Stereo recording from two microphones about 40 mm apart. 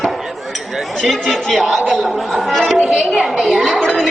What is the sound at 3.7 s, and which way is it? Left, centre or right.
Music, left.